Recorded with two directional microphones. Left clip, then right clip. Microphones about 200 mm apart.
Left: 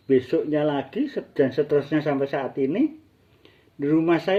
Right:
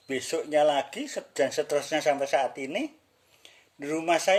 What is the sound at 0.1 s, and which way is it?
Speech, 20° right (ahead or behind).